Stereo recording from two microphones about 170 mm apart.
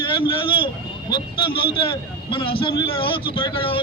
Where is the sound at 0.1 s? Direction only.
30° left (ahead or behind).